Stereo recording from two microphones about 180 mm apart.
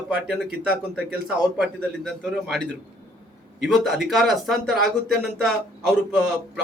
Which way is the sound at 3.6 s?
Centre (ahead or behind).